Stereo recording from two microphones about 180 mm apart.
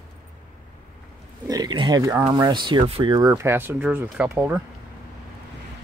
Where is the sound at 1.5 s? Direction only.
25° right (ahead or behind).